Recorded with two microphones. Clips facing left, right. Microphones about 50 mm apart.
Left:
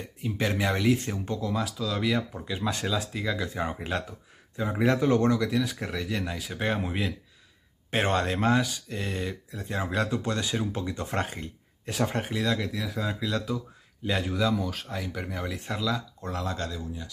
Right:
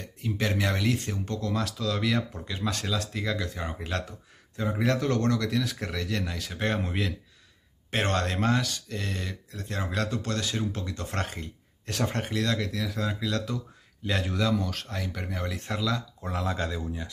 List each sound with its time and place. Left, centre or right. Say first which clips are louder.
0.0 s speech: left 1 dB; centre
1.4 s speech: right 1 dB; centre
16.7 s speech: right 3 dB; right